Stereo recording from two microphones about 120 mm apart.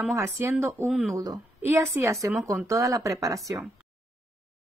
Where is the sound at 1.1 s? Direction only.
30° right (ahead or behind).